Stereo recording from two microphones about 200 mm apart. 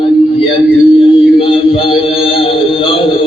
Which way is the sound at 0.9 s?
25° left (ahead or behind).